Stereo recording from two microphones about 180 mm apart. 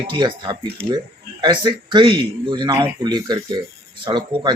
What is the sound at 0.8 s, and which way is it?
Speech, 5° left (ahead or behind).